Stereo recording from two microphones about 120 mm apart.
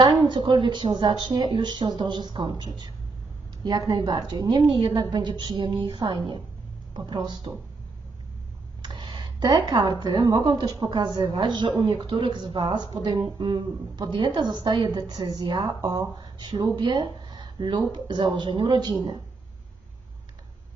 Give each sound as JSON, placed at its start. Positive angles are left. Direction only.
{"t": 0.3, "sound": "a woman's voice", "side_deg": -45}
{"t": 8.8, "sound": "a sound", "side_deg": -45}
{"t": 10.0, "sound": "a woman's voice", "side_deg": -35}